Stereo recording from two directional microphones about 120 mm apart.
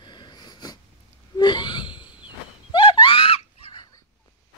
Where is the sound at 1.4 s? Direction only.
40° left (ahead or behind).